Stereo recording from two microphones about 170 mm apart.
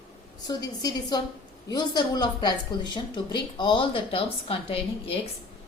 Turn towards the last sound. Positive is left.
turn(degrees=35)  # may be behind; listen again after turning